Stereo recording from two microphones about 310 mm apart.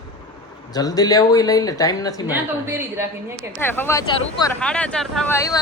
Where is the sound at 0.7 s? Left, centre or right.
Centre.